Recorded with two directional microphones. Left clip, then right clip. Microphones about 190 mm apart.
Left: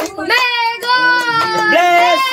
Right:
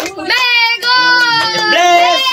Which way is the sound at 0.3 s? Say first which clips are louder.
Right 3 dB; 60° left (ahead or behind).